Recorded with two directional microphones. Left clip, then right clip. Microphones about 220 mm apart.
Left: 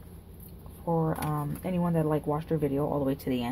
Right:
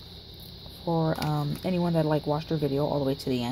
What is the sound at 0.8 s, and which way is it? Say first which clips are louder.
Speech: right 2 dB; 25° right (ahead or behind).